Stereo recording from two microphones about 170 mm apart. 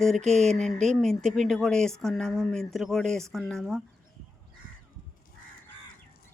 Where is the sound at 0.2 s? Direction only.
40° right (ahead or behind).